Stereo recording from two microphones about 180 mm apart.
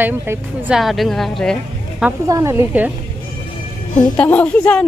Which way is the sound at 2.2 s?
15° right (ahead or behind).